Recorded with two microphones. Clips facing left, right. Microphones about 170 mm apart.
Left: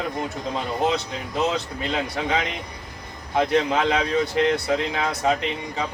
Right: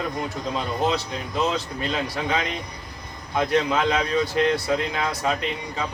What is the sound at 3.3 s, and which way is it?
Speech, 25° left (ahead or behind).